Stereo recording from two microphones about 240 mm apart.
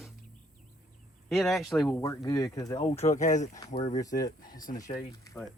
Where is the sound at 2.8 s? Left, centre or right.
Left.